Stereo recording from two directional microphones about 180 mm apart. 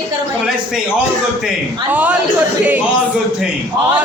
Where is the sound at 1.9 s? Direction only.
10° right (ahead or behind).